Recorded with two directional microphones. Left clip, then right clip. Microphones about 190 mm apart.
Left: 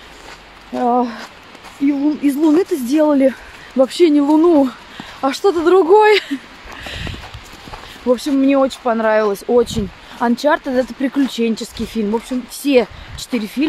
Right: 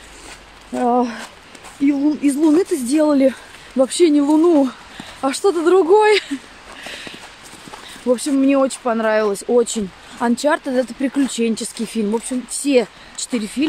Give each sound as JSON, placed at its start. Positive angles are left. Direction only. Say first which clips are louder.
{"t": 0.7, "sound": "speech", "louder": "left 1 dB", "side_deg": -20}
{"t": 6.8, "sound": "a sound", "louder": "left 3 dB", "side_deg": 0}
{"t": 8.1, "sound": "speech", "louder": "left 2 dB", "side_deg": -10}